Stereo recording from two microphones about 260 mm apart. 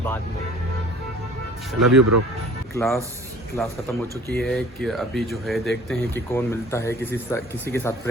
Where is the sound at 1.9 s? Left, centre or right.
Right.